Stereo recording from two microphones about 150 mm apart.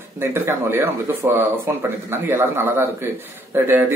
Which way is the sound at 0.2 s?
15° right (ahead or behind).